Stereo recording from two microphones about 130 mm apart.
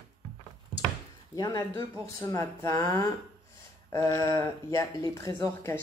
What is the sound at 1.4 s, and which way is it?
Speech, 25° left (ahead or behind).